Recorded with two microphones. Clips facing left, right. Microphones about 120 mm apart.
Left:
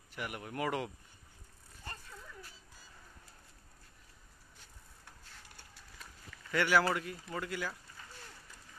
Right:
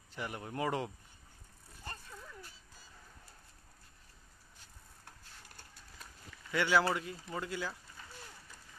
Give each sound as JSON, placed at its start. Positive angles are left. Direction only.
{"t": 0.1, "sound": "speech", "side_deg": -25}
{"t": 6.5, "sound": "speech", "side_deg": -20}